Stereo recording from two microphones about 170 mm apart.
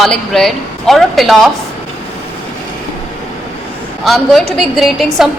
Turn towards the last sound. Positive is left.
turn(degrees=0)  # may be behind; listen again after turning